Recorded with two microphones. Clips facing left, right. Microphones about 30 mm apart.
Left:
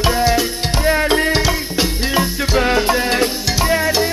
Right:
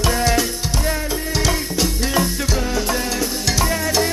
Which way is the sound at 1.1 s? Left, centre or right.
Left.